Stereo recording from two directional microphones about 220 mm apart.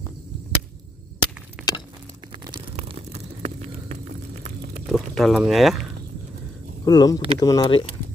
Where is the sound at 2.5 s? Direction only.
25° right (ahead or behind).